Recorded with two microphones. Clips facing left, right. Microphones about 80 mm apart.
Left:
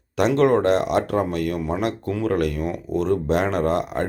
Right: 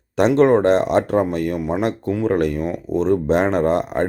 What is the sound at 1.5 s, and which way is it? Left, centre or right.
Speech, centre.